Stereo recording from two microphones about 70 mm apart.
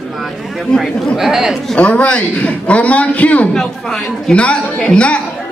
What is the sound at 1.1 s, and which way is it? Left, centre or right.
Speech, centre.